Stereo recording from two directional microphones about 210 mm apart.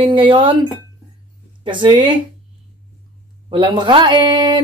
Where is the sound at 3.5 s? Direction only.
25° right (ahead or behind).